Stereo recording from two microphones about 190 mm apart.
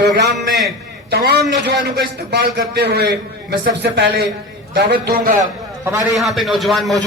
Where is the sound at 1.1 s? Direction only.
60° right (ahead or behind).